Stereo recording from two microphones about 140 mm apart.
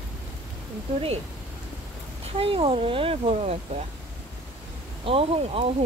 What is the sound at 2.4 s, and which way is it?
Speech, 40° right (ahead or behind).